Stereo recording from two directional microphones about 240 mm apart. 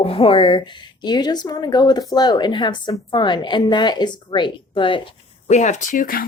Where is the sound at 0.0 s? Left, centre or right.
Left.